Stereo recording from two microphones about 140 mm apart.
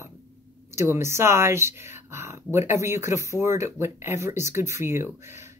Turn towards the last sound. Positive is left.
turn(degrees=-20)  # may be behind; listen again after turning